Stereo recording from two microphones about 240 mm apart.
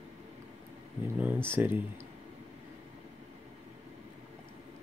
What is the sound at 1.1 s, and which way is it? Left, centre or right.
Speech, centre.